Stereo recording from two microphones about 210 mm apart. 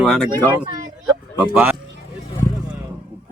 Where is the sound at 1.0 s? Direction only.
5° right (ahead or behind).